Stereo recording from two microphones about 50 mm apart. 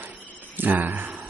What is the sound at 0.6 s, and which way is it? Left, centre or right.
Speech, right.